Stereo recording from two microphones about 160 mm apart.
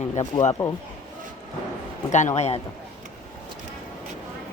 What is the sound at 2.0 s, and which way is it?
Speech, 45° left (ahead or behind).